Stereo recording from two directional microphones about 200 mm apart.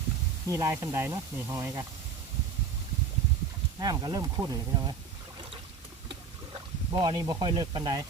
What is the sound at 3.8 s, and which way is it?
Speech, 20° right (ahead or behind).